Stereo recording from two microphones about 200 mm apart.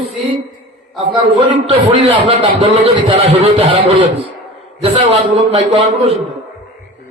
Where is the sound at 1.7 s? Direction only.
25° right (ahead or behind).